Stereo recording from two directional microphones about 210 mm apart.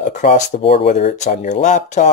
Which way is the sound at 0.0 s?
35° left (ahead or behind).